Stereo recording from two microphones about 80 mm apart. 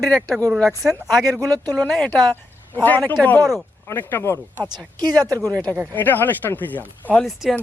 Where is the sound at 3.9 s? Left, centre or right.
Left.